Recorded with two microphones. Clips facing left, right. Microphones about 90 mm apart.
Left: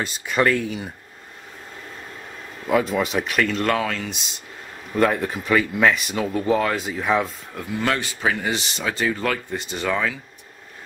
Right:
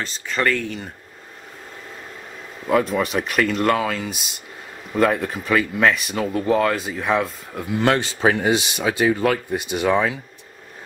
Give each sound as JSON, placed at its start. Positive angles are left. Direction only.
{"t": 0.0, "sound": "speech", "side_deg": 10}
{"t": 2.6, "sound": "speech", "side_deg": 0}
{"t": 8.0, "sound": "speech", "side_deg": -30}
{"t": 8.5, "sound": "speech", "side_deg": -15}